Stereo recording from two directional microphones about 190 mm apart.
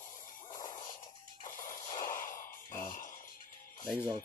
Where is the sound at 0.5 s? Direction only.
25° left (ahead or behind).